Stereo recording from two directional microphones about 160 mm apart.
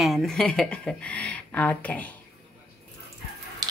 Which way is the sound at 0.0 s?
Centre (ahead or behind).